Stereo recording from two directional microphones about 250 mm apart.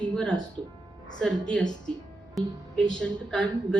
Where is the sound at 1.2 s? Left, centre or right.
Centre.